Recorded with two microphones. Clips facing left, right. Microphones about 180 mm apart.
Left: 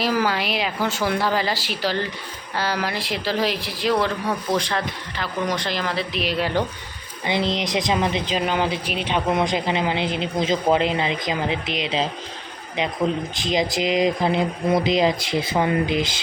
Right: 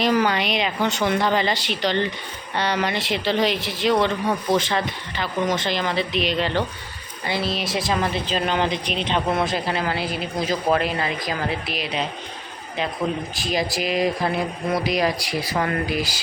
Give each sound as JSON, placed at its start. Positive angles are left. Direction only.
{"t": 0.0, "sound": "speech", "side_deg": 5}
{"t": 13.4, "sound": "speech", "side_deg": 20}